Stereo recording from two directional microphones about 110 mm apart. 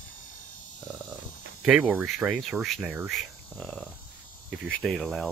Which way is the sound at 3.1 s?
Centre (ahead or behind).